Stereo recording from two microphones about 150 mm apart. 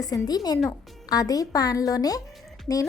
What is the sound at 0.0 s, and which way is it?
A woman's voice, 25° left (ahead or behind).